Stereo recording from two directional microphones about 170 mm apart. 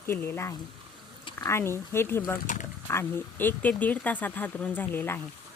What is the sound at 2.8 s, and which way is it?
Speech, 15° left (ahead or behind).